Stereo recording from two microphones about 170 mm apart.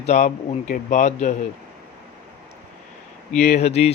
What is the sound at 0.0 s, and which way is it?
Speech, 45° left (ahead or behind).